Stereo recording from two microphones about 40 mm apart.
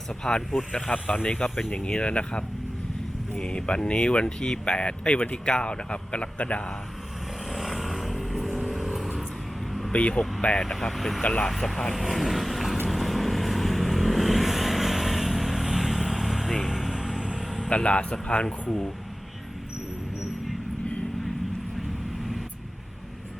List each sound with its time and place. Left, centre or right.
0.1 s speech: left
7.5 s vehicle: centre
9.9 s speech: left
10.6 s speech: centre
10.9 s speech: centre
11.2 s speech: left
11.4 s speech: centre
11.9 s vehicle: centre
16.9 s music: centre
17.7 s speech: left